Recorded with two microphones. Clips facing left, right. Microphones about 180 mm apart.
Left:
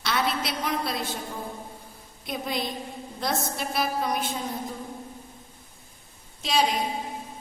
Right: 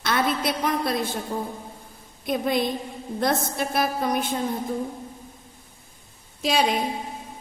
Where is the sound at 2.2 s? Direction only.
50° right (ahead or behind).